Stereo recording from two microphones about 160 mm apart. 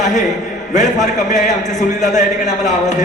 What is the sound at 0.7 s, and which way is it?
Speech, 50° left (ahead or behind).